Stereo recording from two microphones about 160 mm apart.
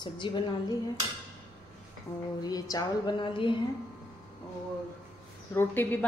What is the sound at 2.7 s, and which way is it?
Speech, 25° left (ahead or behind).